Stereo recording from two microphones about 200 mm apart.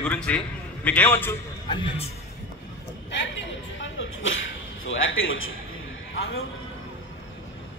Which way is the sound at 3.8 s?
75° left (ahead or behind).